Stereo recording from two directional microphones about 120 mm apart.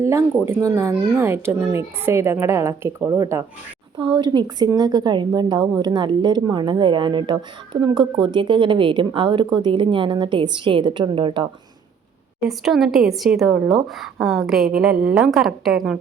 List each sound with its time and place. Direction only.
0.0 s a sound: 20° right (ahead or behind)
0.4 s a woman's voice: 20° right (ahead or behind)
3.9 s speech: 40° right (ahead or behind)
12.4 s a woman's voice: centre (ahead or behind)